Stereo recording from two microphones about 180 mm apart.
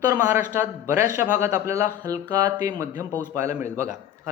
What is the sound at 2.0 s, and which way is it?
Music, 20° right (ahead or behind).